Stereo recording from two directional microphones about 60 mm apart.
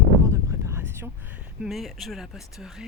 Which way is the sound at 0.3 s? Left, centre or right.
Right.